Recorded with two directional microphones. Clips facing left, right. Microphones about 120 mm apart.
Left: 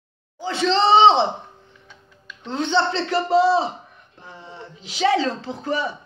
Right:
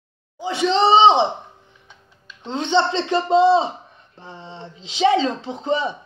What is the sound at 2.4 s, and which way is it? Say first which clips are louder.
A woman's voice: right 2 dB; 20° right (ahead or behind).